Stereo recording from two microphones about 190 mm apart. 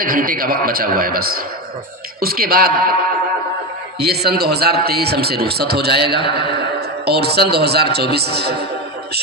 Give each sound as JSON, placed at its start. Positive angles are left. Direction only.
{"t": 0.0, "sound": "a man's voice", "side_deg": -50}
{"t": 4.0, "sound": "a man's voice", "side_deg": -55}
{"t": 6.2, "sound": "a man's voice", "side_deg": 25}
{"t": 7.0, "sound": "a man's voice", "side_deg": -60}